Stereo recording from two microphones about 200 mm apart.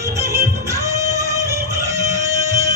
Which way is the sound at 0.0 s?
15° right (ahead or behind).